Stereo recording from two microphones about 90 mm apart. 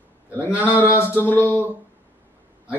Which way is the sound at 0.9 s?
25° left (ahead or behind).